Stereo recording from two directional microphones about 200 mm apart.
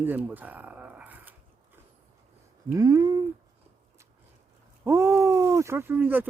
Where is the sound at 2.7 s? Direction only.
15° right (ahead or behind).